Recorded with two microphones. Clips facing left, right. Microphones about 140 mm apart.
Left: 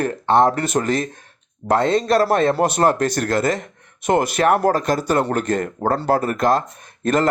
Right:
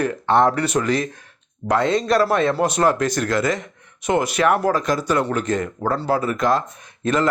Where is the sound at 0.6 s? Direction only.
45° left (ahead or behind).